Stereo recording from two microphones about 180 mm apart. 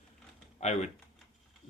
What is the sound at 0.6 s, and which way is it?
Speech, 40° left (ahead or behind).